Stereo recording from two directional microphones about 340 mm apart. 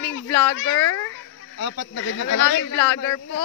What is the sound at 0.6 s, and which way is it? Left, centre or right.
Speech, left.